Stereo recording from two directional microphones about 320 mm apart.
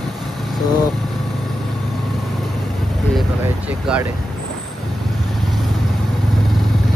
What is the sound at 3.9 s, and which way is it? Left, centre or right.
Speech, centre.